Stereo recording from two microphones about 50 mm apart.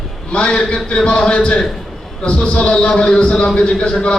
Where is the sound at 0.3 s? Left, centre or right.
Centre.